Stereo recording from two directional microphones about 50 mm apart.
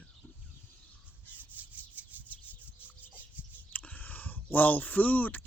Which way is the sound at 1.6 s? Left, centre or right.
Right.